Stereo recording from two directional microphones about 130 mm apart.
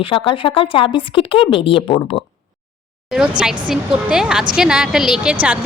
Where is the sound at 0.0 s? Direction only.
40° left (ahead or behind).